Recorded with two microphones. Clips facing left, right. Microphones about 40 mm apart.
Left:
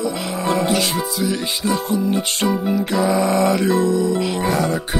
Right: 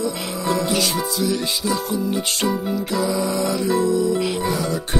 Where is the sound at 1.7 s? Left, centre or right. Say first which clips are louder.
Left 4 dB; left.